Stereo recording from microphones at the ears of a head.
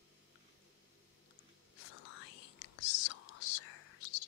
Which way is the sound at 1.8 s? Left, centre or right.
Left.